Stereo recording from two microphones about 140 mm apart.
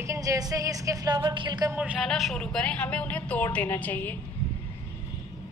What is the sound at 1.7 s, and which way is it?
Speech, 10° right (ahead or behind).